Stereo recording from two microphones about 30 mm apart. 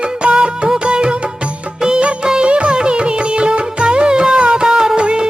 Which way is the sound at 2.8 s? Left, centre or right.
Right.